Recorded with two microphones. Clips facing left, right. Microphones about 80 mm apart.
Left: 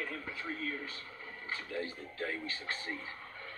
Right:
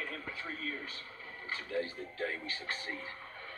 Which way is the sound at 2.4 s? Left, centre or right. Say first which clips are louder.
Even; left.